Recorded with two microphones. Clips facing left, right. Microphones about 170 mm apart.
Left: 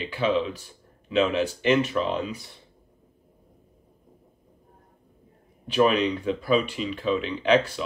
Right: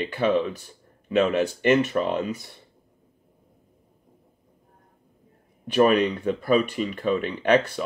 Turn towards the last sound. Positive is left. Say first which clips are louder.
# right 1 dB
turn(degrees=-50)  # may be behind; listen again after turning